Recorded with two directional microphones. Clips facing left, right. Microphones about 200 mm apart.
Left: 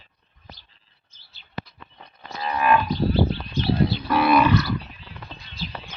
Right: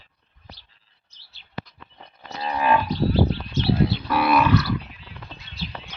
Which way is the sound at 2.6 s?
35° right (ahead or behind).